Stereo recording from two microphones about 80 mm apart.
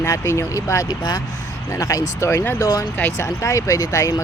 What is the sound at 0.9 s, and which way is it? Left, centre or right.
Speech, left.